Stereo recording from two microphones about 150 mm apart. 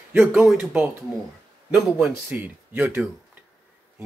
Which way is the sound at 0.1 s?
10° right (ahead or behind).